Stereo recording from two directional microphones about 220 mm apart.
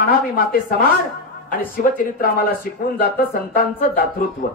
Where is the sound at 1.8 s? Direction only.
40° left (ahead or behind).